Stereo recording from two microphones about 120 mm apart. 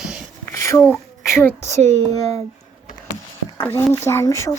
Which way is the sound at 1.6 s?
70° right (ahead or behind).